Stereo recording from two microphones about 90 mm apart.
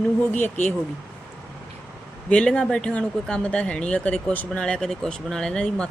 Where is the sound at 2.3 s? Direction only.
10° left (ahead or behind).